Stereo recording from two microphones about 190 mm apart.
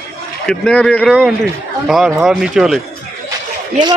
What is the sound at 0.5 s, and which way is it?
Speech, 5° left (ahead or behind).